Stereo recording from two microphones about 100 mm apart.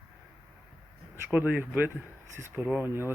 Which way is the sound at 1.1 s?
15° right (ahead or behind).